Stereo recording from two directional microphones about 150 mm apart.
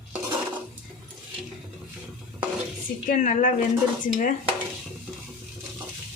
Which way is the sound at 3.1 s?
60° left (ahead or behind).